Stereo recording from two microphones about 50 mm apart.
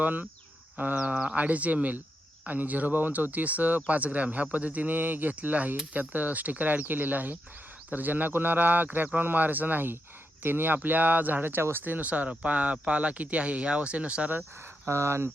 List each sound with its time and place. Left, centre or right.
0.0 s speech: right
14.8 s speech: right